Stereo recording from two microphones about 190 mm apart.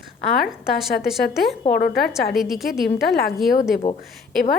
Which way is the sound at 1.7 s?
55° left (ahead or behind).